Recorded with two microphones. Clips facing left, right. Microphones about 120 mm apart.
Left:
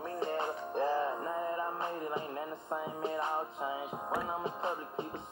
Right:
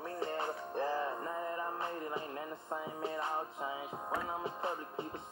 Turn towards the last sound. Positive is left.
turn(degrees=20)  # may be behind; listen again after turning